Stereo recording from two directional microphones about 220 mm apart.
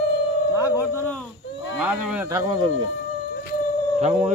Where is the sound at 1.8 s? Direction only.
5° right (ahead or behind).